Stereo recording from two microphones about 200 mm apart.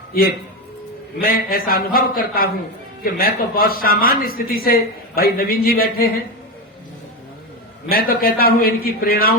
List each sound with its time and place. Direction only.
1.2 s a man's voice: 50° left (ahead or behind)
7.9 s a man's voice: 50° left (ahead or behind)